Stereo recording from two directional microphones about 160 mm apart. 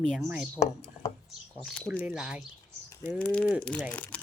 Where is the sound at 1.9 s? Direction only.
10° right (ahead or behind).